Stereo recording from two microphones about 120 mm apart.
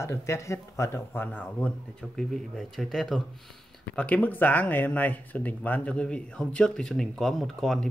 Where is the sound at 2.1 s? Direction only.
Centre (ahead or behind).